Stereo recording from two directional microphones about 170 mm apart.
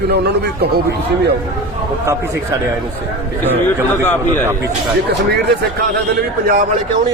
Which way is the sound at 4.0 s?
10° left (ahead or behind).